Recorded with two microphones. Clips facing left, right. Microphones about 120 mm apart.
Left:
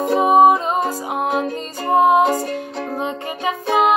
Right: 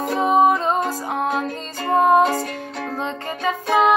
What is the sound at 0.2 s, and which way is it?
Music, 20° left (ahead or behind).